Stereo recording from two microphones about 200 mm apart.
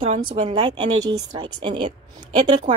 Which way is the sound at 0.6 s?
20° right (ahead or behind).